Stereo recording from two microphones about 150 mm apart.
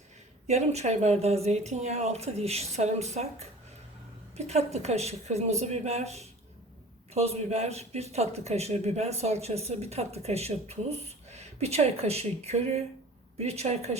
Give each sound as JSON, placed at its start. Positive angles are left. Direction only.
{"t": 0.4, "sound": "a man's voice", "side_deg": -50}
{"t": 4.4, "sound": "a man's voice", "side_deg": -45}